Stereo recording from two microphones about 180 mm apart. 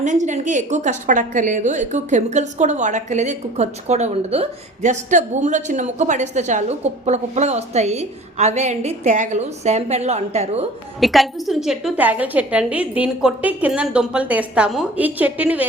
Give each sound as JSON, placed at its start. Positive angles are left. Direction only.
{"t": 0.0, "sound": "a woman's voice", "side_deg": -40}
{"t": 11.0, "sound": "a woman's voice", "side_deg": 0}